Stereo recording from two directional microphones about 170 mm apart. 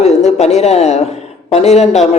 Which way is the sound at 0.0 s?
40° left (ahead or behind).